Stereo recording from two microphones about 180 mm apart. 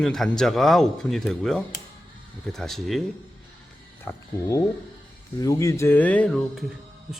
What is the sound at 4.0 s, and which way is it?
A man's voice, 15° left (ahead or behind).